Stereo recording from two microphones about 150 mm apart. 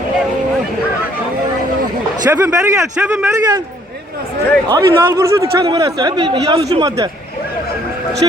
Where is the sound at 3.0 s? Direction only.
10° right (ahead or behind).